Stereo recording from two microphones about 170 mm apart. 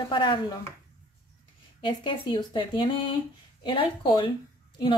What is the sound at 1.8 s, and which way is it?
Speech, 30° left (ahead or behind).